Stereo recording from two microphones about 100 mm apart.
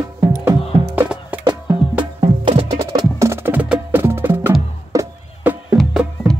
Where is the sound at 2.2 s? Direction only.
90° right.